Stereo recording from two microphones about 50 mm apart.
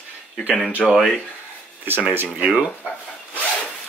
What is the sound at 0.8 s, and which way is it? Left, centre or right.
Speech, centre.